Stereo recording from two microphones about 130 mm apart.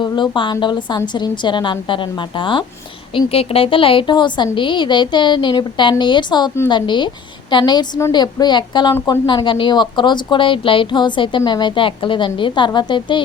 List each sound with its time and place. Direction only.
0.0 s a woman's voice: 35° left (ahead or behind)